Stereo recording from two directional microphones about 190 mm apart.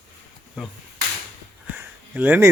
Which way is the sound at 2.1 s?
10° right (ahead or behind).